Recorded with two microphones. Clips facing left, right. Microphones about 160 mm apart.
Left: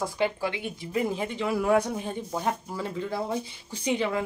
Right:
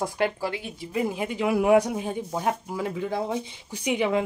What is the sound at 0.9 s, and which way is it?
Speech, 10° right (ahead or behind).